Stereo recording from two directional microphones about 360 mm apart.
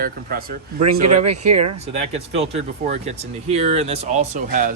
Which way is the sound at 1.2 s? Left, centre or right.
Right.